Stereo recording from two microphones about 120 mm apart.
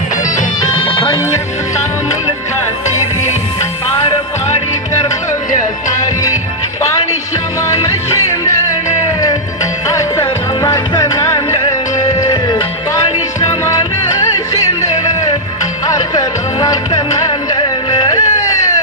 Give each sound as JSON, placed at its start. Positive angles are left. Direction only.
{"t": 0.8, "sound": "music", "side_deg": 45}
{"t": 7.7, "sound": "music", "side_deg": 25}
{"t": 9.8, "sound": "music", "side_deg": 25}